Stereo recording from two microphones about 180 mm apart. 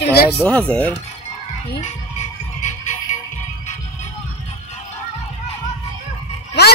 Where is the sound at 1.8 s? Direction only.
40° left (ahead or behind).